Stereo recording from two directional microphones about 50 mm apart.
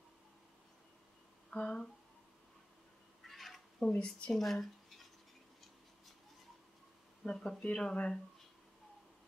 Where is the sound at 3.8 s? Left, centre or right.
Left.